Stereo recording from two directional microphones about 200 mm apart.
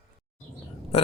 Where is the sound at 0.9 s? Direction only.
30° left (ahead or behind).